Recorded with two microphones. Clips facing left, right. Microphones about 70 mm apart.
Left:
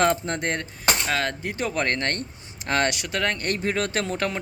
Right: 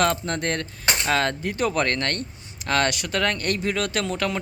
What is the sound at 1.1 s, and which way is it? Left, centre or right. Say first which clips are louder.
Speech: right 3 dB; centre.